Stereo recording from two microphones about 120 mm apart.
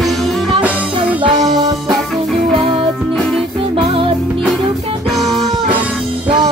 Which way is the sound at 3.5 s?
50° right (ahead or behind).